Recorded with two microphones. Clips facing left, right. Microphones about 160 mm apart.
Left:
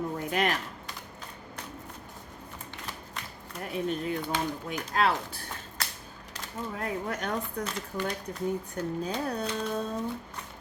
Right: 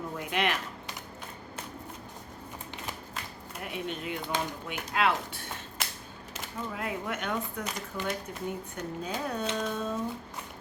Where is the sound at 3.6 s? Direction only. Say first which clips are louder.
Left 5 dB; 35° left (ahead or behind).